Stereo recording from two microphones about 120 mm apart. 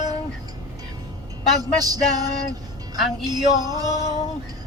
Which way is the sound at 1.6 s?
30° right (ahead or behind).